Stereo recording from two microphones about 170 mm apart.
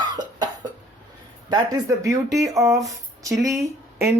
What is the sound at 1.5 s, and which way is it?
Speech, 20° right (ahead or behind).